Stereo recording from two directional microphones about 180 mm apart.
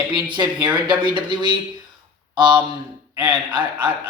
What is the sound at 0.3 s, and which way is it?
Speech, 25° right (ahead or behind).